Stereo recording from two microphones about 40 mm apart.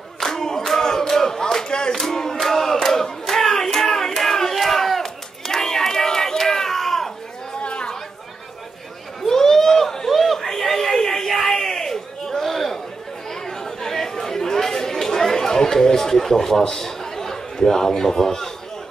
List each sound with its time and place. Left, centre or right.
0.2 s a sound: centre
2.0 s battle cry: centre
7.6 s chatter: left
9.2 s chatter: centre